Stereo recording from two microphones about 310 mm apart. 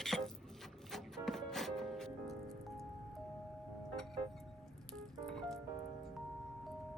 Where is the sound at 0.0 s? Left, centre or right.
Centre.